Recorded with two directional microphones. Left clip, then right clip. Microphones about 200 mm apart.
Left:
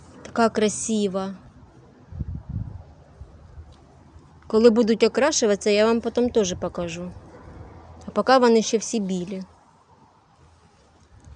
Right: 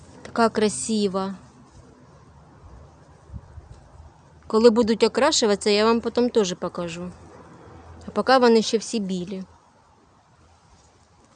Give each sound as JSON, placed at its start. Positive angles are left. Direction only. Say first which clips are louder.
{"t": 0.2, "sound": "speech", "louder": "even", "side_deg": 0}
{"t": 4.4, "sound": "speech", "louder": "even", "side_deg": -5}